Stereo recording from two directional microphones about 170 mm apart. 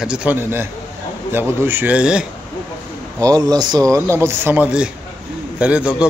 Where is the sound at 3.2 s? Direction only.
20° right (ahead or behind); by 6.1 s 5° right (ahead or behind).